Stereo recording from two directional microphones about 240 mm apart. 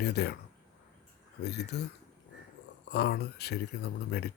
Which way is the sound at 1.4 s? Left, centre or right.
Left.